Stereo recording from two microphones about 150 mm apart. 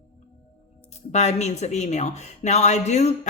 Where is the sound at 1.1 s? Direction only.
50° left (ahead or behind).